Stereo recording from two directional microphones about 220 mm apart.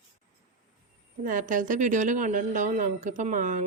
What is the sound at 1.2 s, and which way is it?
Speech, 35° right (ahead or behind).